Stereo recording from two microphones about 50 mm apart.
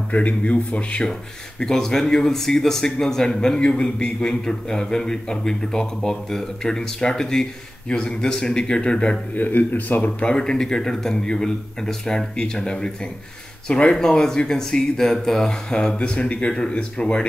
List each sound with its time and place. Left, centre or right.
0.1 s speech: left
1.6 s a man's voice: centre
9.3 s a man's voice: left
10.2 s a man's voice: centre